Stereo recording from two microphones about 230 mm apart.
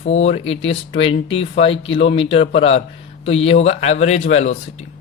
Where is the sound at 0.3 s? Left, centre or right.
Left.